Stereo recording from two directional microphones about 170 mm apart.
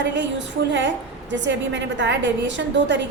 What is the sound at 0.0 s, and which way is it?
A woman's voice, 90° right.